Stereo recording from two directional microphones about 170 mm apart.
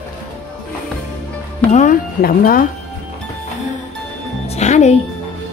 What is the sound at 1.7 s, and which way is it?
Speech, 50° left (ahead or behind).